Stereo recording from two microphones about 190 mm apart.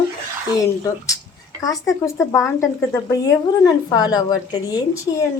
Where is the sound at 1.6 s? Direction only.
20° left (ahead or behind).